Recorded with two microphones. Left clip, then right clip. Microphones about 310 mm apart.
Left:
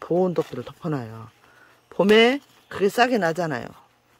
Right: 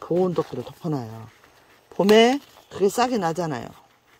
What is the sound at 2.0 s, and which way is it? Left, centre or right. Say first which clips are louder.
Speech: even; centre.